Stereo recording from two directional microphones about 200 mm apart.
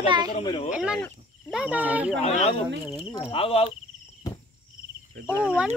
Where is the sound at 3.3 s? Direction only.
30° left (ahead or behind).